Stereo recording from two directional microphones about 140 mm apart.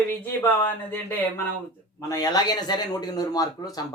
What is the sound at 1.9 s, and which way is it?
A man's voice, 25° left (ahead or behind).